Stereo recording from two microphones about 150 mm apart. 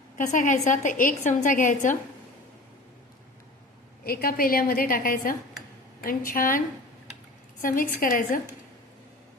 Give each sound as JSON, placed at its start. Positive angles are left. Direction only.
{"t": 0.2, "sound": "a woman's voice", "side_deg": 60}
{"t": 4.0, "sound": "a woman's voice", "side_deg": 85}
{"t": 7.9, "sound": "a woman's voice", "side_deg": 70}